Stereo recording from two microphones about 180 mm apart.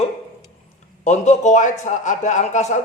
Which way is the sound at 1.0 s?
40° left (ahead or behind).